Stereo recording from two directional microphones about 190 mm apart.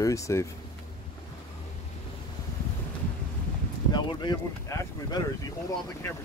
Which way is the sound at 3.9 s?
25° left (ahead or behind).